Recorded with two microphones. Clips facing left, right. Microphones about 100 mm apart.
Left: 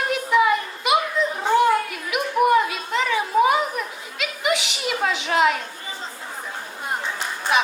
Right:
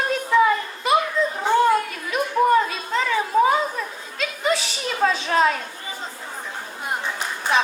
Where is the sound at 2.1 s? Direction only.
15° left (ahead or behind).